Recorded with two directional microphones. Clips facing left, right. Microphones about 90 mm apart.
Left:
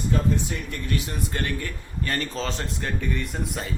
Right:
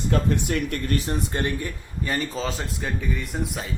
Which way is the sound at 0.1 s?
65° right (ahead or behind).